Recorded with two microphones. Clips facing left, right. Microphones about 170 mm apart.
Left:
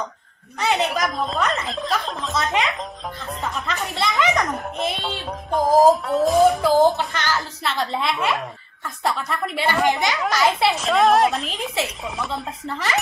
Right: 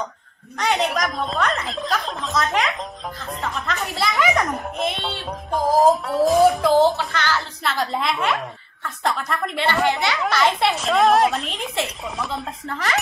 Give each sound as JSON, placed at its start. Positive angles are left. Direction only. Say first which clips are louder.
{"t": 0.6, "sound": "a woman's voice", "louder": "even", "side_deg": 0}
{"t": 7.0, "sound": "speech", "louder": "even", "side_deg": 15}
{"t": 7.6, "sound": "a woman's voice", "louder": "even", "side_deg": 0}